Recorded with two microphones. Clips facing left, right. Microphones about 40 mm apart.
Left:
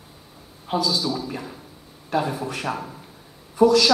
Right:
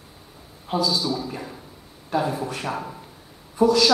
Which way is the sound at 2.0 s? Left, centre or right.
Centre.